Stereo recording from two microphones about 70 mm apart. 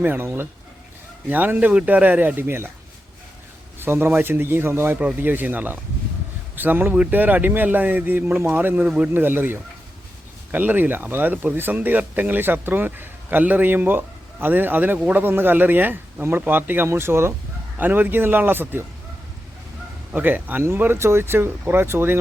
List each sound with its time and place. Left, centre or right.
0.0 s speech: right
1.3 s speech: right
3.8 s speech: right
4.9 s speech: right
20.1 s speech: right